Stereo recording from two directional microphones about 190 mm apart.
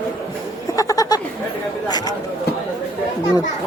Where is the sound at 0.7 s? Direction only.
20° left (ahead or behind).